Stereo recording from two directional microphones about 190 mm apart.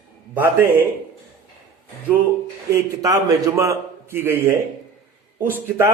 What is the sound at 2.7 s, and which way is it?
A man's voice, 20° right (ahead or behind).